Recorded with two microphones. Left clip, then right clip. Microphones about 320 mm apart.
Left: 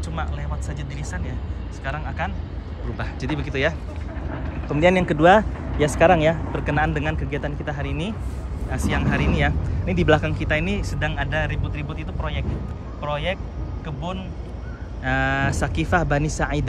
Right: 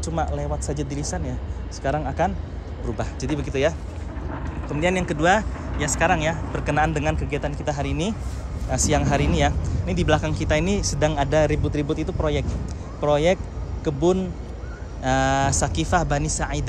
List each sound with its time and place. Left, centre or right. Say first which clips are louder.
0.0 s speech: right 5 dB; centre
15.0 s speech: right 2 dB; centre